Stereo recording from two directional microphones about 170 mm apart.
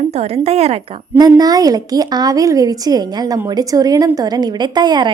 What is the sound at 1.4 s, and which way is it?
A woman's voice, 20° right (ahead or behind).